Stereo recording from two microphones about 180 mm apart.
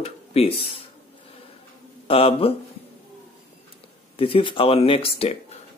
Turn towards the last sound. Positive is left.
turn(degrees=35)  # may be behind; listen again after turning